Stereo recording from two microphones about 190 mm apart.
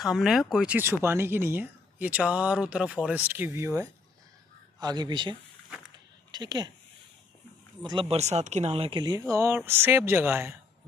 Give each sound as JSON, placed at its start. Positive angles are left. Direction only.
{"t": 0.0, "sound": "speech", "side_deg": 0}
{"t": 7.8, "sound": "speech", "side_deg": -25}